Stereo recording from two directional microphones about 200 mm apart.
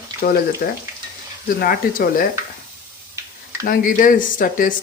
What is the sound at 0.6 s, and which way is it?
Speech, 50° left (ahead or behind).